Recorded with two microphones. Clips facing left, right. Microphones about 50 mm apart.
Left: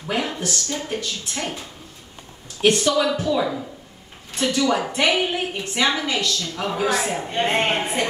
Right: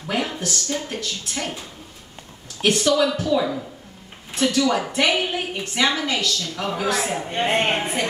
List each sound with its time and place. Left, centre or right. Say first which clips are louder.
0.3 s a sound: left 1 dB; centre
0.8 s a woman's voice: left 2 dB; centre
2.6 s a woman's voice: even; centre